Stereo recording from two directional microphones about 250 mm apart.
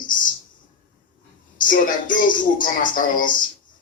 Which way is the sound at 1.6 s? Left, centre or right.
Left.